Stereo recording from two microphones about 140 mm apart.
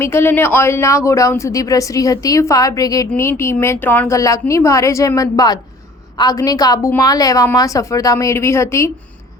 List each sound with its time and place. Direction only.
0.0 s speech: 15° left (ahead or behind)